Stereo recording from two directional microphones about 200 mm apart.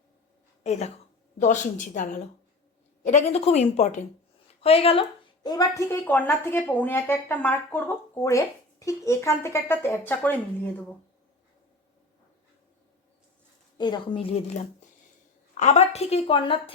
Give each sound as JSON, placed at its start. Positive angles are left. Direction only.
{"t": 0.6, "sound": "a woman's voice", "side_deg": 35}
{"t": 13.7, "sound": "a woman's voice", "side_deg": 20}
{"t": 15.5, "sound": "a woman's voice", "side_deg": 35}